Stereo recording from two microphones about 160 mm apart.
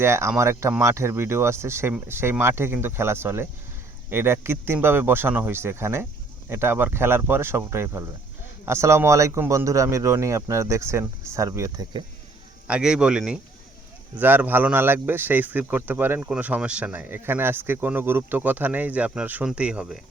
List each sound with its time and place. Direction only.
0.0 s speech: 15° right (ahead or behind)
12.6 s speech: 5° right (ahead or behind)